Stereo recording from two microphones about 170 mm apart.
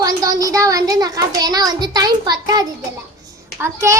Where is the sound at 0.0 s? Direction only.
20° right (ahead or behind).